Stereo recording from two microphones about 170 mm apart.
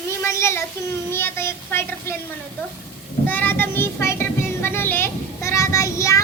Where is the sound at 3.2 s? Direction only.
10° left (ahead or behind).